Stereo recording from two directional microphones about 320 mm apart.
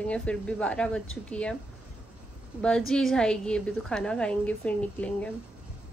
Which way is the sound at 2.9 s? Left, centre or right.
Centre.